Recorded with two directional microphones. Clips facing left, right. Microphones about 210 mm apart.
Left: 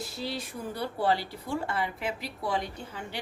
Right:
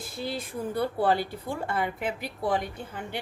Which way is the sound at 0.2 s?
50° right (ahead or behind).